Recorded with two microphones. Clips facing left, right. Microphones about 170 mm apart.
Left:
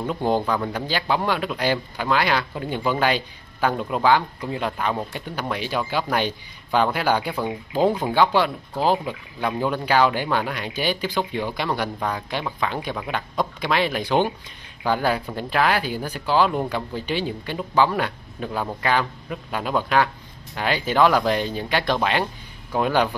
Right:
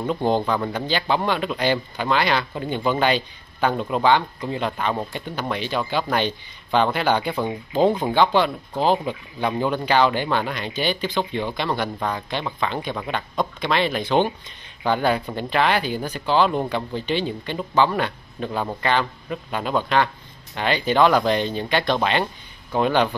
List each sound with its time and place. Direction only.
0.0 s speech: 5° left (ahead or behind)